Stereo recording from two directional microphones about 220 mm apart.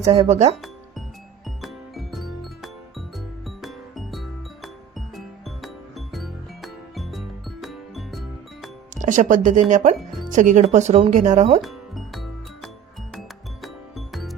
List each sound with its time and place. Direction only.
0.0 s speech: 30° right (ahead or behind)
0.5 s music: centre (ahead or behind)
9.0 s speech: 35° right (ahead or behind)
11.6 s music: centre (ahead or behind)